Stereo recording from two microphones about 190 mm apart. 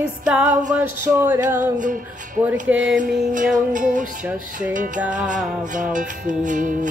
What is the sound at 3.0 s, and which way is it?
Music, 45° right (ahead or behind).